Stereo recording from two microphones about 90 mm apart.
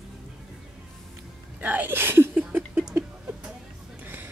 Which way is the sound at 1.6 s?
20° right (ahead or behind).